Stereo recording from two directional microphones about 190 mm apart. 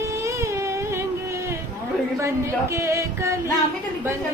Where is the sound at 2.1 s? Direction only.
15° right (ahead or behind).